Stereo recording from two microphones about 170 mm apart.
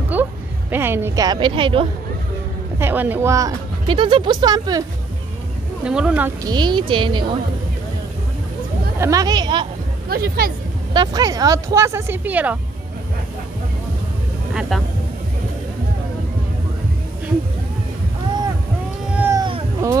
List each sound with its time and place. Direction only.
0.1 s a woman's voice: 10° right (ahead or behind); by 1.9 s 30° right (ahead or behind)
2.8 s speech: 10° right (ahead or behind)
5.9 s speech: 5° right (ahead or behind)
6.4 s speech: 25° right (ahead or behind)
9.0 s speech: 20° right (ahead or behind)
10.0 s speech: 65° right (ahead or behind)
10.9 s speech: 25° right (ahead or behind); by 12.5 s 10° right (ahead or behind)
14.5 s vehicle: 5° right (ahead or behind)
19.1 s vehicle: 15° right (ahead or behind)